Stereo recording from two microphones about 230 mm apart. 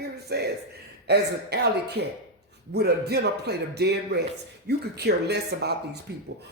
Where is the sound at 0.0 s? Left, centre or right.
Right.